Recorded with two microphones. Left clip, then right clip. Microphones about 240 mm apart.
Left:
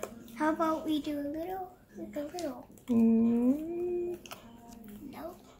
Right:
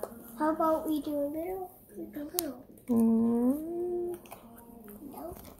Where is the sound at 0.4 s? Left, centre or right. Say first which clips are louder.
Right 2 dB; left.